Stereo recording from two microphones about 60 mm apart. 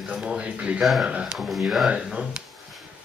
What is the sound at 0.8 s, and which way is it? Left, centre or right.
Speech, centre.